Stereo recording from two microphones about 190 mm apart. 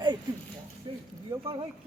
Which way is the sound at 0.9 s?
30° right (ahead or behind).